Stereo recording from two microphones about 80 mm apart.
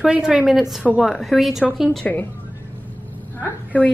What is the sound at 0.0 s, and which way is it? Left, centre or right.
A woman's voice, centre.